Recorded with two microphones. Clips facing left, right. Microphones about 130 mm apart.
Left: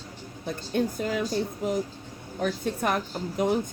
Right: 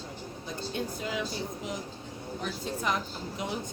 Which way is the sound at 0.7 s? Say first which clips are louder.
Left 8 dB; 50° left (ahead or behind).